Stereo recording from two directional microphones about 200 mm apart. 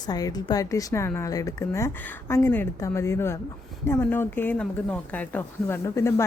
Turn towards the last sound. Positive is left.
turn(degrees=15)  # may be behind; listen again after turning